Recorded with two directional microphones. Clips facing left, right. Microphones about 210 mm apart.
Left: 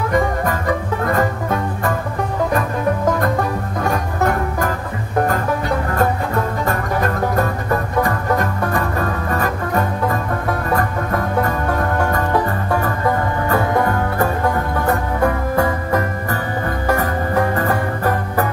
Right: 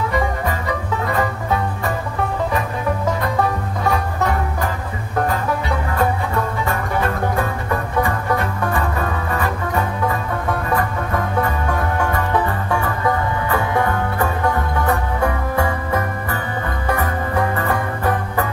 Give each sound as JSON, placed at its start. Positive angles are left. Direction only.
{"t": 1.0, "sound": "music", "side_deg": 50}
{"t": 3.8, "sound": "music", "side_deg": 50}
{"t": 6.6, "sound": "music", "side_deg": 40}
{"t": 12.1, "sound": "music", "side_deg": 45}